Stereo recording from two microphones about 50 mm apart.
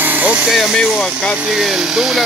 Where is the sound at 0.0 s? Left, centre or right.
Right.